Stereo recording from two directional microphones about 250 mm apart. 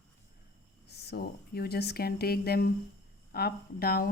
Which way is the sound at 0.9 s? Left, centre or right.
Left.